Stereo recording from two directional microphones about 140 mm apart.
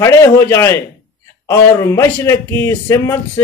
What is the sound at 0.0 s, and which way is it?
A man's voice, 20° left (ahead or behind).